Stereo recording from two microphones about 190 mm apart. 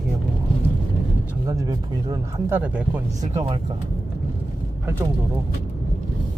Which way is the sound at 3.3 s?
20° right (ahead or behind).